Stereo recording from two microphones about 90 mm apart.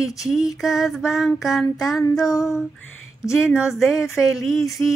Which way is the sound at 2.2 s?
40° left (ahead or behind).